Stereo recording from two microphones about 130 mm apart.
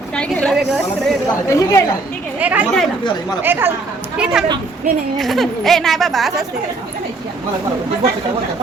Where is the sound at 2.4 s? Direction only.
10° right (ahead or behind).